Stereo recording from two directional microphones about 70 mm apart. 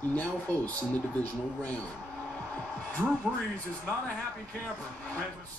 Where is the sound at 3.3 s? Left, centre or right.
Left.